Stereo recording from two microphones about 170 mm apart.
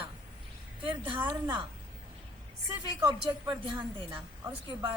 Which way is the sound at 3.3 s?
25° right (ahead or behind).